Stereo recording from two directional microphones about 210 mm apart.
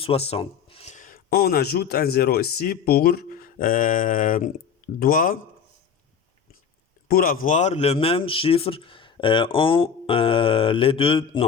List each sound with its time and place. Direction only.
0.0 s speech: 30° left (ahead or behind)
7.1 s speech: 45° left (ahead or behind); by 11.4 s 25° left (ahead or behind)